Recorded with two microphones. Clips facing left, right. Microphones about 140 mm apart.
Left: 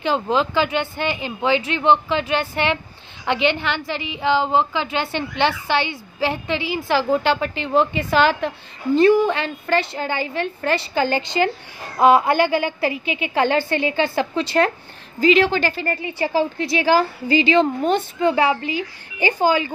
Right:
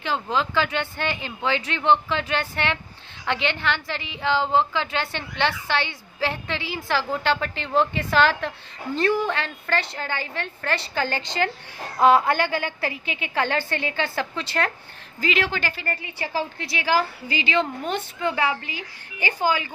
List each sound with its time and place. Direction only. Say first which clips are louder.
0.0 s a woman's voice: left 5 dB; 20° left (ahead or behind)